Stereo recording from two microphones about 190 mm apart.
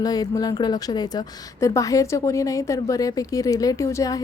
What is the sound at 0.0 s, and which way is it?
A woman's voice, 20° left (ahead or behind).